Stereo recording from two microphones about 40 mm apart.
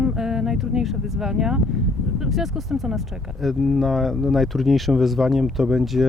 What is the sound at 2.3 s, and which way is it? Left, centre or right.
Speech, centre.